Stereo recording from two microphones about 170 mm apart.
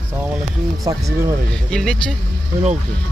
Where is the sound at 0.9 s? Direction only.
25° right (ahead or behind).